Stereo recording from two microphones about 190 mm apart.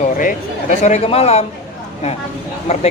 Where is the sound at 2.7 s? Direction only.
35° left (ahead or behind).